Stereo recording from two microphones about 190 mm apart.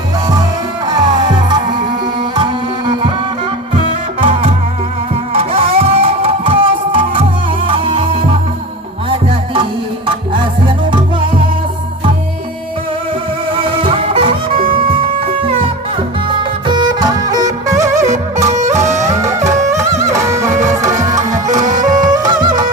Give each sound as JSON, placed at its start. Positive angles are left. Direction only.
{"t": 0.9, "sound": "music", "side_deg": -20}
{"t": 4.2, "sound": "music", "side_deg": -30}
{"t": 10.3, "sound": "music", "side_deg": -25}
{"t": 13.5, "sound": "music", "side_deg": -25}
{"t": 16.4, "sound": "music", "side_deg": -25}
{"t": 18.9, "sound": "music", "side_deg": -40}
{"t": 20.0, "sound": "music", "side_deg": -15}
{"t": 20.5, "sound": "music", "side_deg": -40}
{"t": 20.8, "sound": "music", "side_deg": -15}
{"t": 21.6, "sound": "music", "side_deg": -40}
{"t": 22.0, "sound": "music", "side_deg": -20}